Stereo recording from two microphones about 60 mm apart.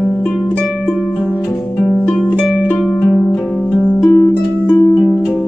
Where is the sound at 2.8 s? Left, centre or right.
Centre.